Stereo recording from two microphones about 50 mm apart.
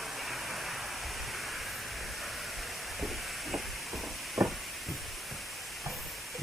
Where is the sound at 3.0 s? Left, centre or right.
Centre.